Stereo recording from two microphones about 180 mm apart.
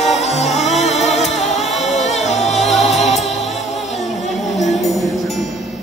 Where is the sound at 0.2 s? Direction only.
40° left (ahead or behind).